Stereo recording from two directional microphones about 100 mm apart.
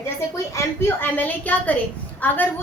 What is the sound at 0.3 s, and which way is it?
A woman's voice, 30° left (ahead or behind).